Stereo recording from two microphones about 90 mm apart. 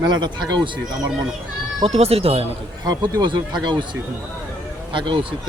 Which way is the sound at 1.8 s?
90° right.